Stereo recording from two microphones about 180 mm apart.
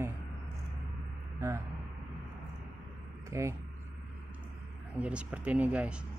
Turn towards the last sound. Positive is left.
turn(degrees=-5)  # may be behind; listen again after turning